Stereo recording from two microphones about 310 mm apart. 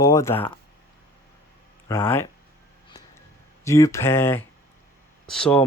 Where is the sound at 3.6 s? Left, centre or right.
Centre.